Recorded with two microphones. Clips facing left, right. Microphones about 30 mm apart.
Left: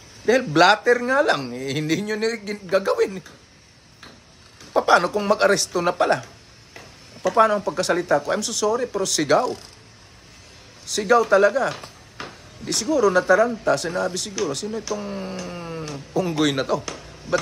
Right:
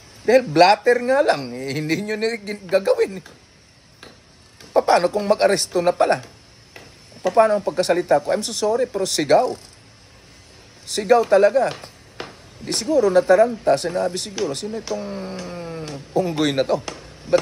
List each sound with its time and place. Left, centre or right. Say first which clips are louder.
0.2 s speech: right 4 dB; centre
0.8 s speech: right 2 dB; right
4.8 s speech: left 1 dB; centre
7.3 s speech: right 2 dB; left
7.6 s speech: right 3 dB; right
10.9 s speech: right 1 dB; right
15.0 s speech: even; centre
15.5 s a sound: right 1 dB; centre
15.8 s a sound: right 3 dB; right
16.3 s speech: even; centre